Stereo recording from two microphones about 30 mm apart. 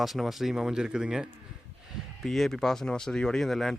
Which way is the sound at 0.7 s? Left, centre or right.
Right.